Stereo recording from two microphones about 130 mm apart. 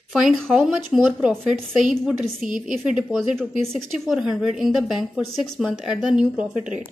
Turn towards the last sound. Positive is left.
turn(degrees=-5)  # may be behind; listen again after turning